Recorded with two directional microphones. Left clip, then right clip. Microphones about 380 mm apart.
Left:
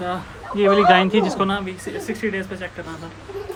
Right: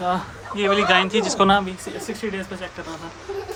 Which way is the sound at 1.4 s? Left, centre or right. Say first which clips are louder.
Right 5 dB; centre.